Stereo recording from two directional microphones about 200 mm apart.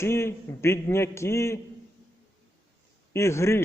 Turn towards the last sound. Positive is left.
turn(degrees=15)  # may be behind; listen again after turning